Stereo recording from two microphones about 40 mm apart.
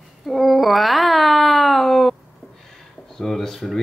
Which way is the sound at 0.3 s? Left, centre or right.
Centre.